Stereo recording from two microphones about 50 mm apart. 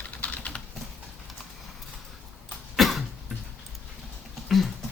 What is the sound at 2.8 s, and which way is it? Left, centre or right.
Cough, centre.